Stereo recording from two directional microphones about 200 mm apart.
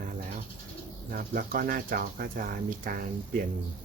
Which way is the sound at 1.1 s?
45° right (ahead or behind).